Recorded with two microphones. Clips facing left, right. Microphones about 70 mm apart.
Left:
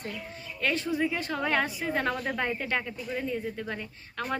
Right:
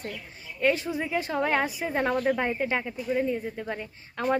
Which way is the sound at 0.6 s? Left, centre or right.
Centre.